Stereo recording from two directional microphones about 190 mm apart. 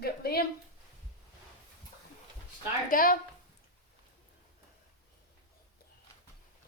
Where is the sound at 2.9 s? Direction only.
50° left (ahead or behind).